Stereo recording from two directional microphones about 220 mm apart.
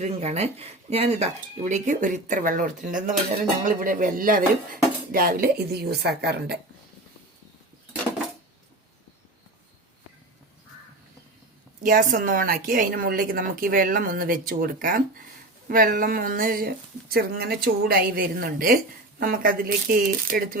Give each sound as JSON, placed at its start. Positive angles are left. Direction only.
{"t": 0.0, "sound": "a woman's voice", "side_deg": -30}
{"t": 11.8, "sound": "a woman's voice", "side_deg": -40}